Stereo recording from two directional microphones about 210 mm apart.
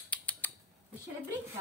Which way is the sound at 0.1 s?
5° left (ahead or behind).